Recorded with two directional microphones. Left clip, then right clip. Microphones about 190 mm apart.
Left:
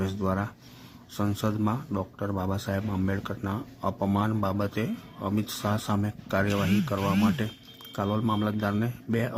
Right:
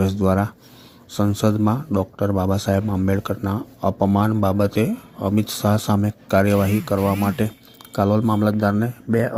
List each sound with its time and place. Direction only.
0.0 s speech: 40° right (ahead or behind); by 9.3 s 20° right (ahead or behind)